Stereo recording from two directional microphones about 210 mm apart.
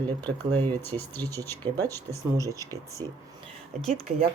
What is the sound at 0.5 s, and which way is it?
Speech, 10° left (ahead or behind).